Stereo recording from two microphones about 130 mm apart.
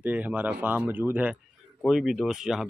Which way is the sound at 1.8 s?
Centre (ahead or behind).